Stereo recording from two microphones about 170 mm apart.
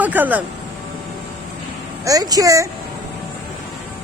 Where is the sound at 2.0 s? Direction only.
20° right (ahead or behind).